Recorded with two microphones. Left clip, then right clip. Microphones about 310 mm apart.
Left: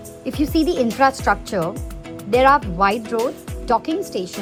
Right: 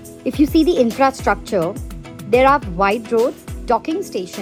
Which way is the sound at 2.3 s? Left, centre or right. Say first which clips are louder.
Right 1 dB; centre.